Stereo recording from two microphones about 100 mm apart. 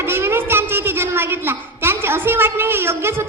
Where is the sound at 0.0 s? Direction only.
25° right (ahead or behind).